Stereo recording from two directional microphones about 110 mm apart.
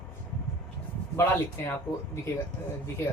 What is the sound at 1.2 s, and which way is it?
Speech, 20° left (ahead or behind).